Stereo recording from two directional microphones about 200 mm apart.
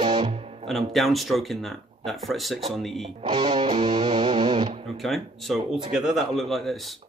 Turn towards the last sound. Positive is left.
turn(degrees=0)  # may be behind; listen again after turning